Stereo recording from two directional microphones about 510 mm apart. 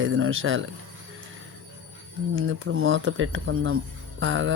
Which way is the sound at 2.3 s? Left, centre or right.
Right.